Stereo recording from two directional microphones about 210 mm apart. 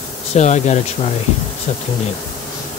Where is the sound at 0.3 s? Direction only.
35° left (ahead or behind).